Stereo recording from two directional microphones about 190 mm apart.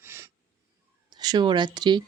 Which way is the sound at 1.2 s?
25° right (ahead or behind).